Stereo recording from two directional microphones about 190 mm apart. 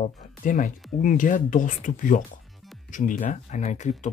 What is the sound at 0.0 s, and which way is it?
Speech, 45° left (ahead or behind).